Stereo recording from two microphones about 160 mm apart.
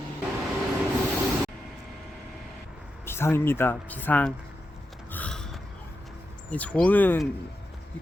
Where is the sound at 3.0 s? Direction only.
15° left (ahead or behind).